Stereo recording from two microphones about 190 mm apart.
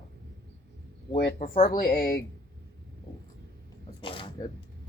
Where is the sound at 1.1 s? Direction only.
50° left (ahead or behind).